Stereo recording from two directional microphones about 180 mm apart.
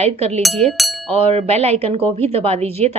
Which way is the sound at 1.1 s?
35° right (ahead or behind).